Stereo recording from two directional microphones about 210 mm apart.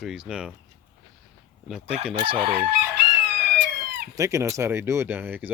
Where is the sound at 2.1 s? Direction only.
25° right (ahead or behind).